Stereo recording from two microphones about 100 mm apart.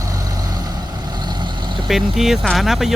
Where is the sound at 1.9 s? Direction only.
5° right (ahead or behind).